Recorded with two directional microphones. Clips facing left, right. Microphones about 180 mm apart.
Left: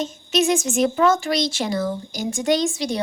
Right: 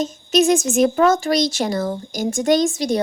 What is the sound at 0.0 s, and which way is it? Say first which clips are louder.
Speech: right 4 dB; 40° right (ahead or behind).